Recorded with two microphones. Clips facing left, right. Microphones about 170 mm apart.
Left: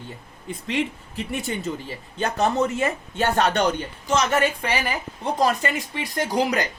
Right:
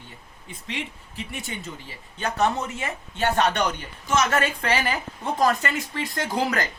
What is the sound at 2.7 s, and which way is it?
Speech, 45° left (ahead or behind).